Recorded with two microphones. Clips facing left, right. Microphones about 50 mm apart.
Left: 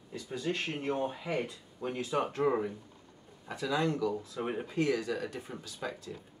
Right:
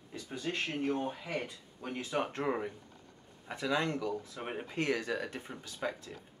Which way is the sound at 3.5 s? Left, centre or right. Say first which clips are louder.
Left 1 dB; right.